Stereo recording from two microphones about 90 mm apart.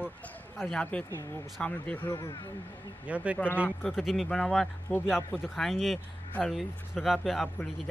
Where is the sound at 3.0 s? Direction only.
15° right (ahead or behind).